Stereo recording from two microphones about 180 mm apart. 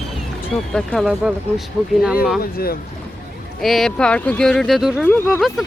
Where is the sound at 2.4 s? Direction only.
55° left (ahead or behind).